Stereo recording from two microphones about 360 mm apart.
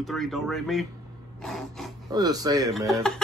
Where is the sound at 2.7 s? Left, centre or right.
Centre.